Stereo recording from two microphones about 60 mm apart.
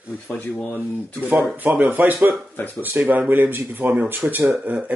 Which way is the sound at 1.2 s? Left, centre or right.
Right.